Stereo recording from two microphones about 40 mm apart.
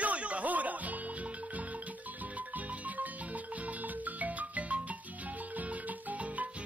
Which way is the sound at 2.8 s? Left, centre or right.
Right.